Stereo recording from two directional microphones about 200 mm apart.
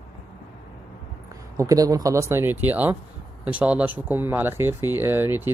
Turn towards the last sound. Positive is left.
turn(degrees=-10)  # may be behind; listen again after turning